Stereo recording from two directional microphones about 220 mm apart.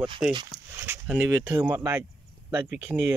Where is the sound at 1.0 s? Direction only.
5° right (ahead or behind).